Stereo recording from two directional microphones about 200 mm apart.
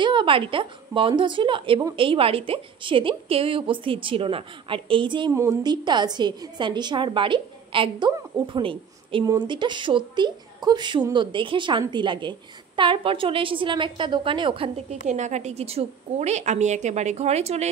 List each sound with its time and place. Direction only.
0.0 s a woman's voice: 25° right (ahead or behind)